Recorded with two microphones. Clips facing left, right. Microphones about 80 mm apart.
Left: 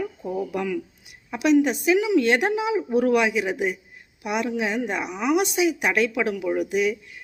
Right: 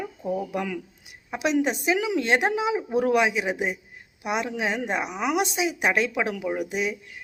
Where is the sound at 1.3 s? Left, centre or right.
Right.